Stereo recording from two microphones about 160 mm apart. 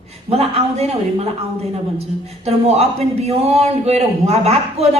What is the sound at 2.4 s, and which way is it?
A man's voice, 40° right (ahead or behind).